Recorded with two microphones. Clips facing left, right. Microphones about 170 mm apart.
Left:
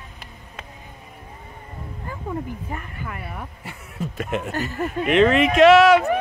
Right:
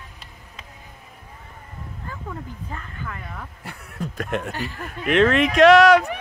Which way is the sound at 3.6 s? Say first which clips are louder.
Right 1 dB; 5° left (ahead or behind).